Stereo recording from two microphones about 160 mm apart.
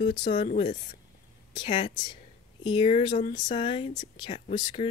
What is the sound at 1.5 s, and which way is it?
Speech, 35° left (ahead or behind).